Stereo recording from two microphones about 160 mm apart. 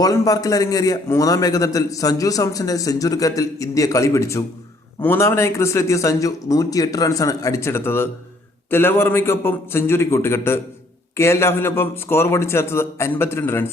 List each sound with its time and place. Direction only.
0.0 s a man's voice: 20° left (ahead or behind)